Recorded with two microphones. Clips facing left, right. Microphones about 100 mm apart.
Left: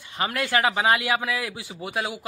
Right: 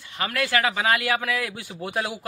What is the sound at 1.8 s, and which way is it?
Speech, 5° left (ahead or behind).